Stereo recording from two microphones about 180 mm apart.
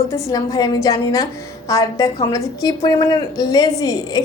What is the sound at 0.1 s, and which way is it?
A woman's voice, 20° left (ahead or behind).